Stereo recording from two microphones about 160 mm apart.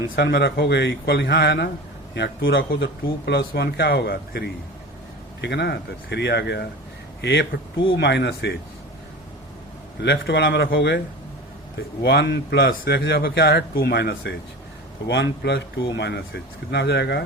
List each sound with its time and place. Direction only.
0.2 s a man's voice: 90° left
5.4 s a man's voice: 90° left
10.0 s a man's voice: 90° left
12.0 s a man's voice: 90° left